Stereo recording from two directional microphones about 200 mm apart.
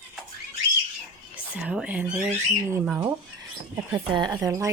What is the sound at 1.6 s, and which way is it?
Speech, 5° right (ahead or behind).